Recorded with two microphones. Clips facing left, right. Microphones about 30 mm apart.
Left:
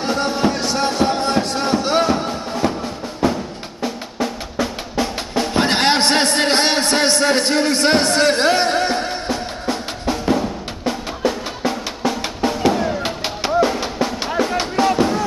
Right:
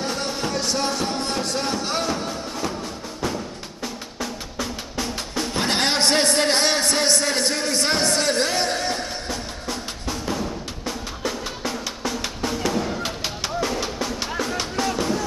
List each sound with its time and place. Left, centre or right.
0.1 s a sound: left
2.2 s music: left
3.8 s drum: left